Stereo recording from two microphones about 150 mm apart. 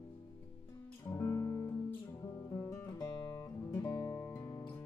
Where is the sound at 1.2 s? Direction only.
20° left (ahead or behind).